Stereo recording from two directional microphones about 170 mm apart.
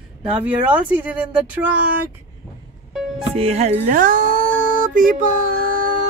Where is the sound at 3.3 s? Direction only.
35° right (ahead or behind); by 5.8 s 55° right (ahead or behind).